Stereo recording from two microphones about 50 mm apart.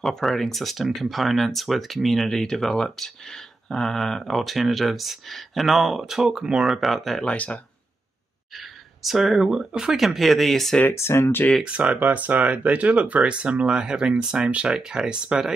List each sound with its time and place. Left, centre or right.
0.0 s speech: centre
7.2 s speech: left
8.5 s speech: centre
10.9 s speech: left
11.6 s speech: right